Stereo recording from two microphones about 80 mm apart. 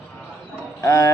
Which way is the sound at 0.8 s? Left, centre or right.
Left.